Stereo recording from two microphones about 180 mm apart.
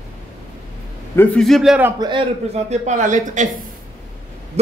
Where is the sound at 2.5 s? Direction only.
40° right (ahead or behind).